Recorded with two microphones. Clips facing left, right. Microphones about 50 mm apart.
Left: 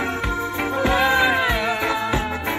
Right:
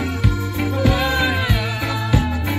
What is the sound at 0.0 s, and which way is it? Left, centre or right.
Music, left.